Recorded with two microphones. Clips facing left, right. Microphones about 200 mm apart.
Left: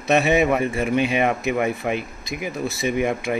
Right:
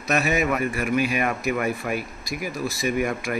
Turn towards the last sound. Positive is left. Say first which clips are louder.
# left 2 dB
turn(degrees=25)  # may be behind; listen again after turning